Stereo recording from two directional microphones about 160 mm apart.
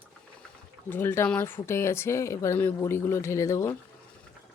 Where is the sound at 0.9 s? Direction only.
15° left (ahead or behind).